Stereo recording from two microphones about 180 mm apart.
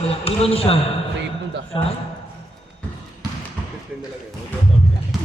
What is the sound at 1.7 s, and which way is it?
Speech, 30° left (ahead or behind).